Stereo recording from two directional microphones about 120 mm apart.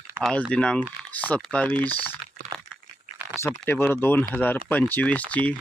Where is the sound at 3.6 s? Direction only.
15° left (ahead or behind).